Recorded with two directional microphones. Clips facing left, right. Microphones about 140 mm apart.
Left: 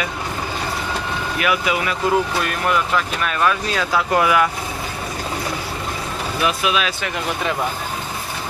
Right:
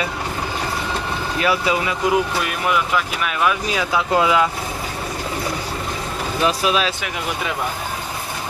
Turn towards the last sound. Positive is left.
turn(degrees=-35)  # may be behind; listen again after turning